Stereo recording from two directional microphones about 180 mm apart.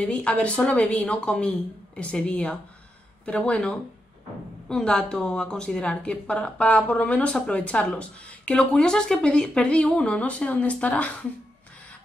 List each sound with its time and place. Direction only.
0.0 s a woman's voice: 5° left (ahead or behind)